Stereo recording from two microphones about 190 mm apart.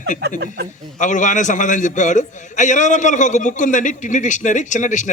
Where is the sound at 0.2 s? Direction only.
55° right (ahead or behind).